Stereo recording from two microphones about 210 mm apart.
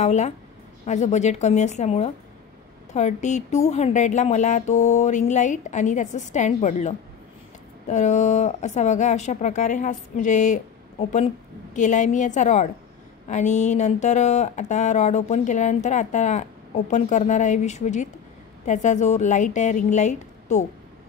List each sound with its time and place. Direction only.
0.0 s speech: 35° left (ahead or behind)